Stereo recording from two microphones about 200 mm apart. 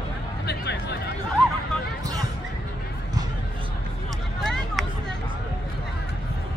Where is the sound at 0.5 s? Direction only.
55° left (ahead or behind).